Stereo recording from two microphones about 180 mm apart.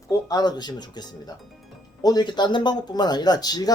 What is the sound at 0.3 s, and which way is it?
Speech, 20° left (ahead or behind).